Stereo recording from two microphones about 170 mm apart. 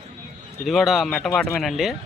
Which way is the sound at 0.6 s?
Centre (ahead or behind).